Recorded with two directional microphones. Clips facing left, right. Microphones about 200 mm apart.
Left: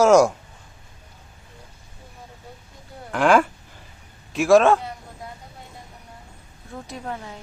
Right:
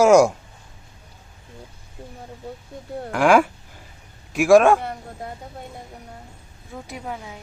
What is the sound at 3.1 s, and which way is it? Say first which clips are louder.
Speech: right 1 dB; 10° right (ahead or behind).